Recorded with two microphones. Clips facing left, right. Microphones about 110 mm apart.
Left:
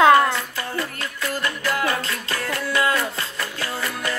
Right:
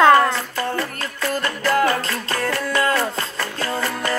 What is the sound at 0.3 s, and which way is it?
Music, 35° right (ahead or behind).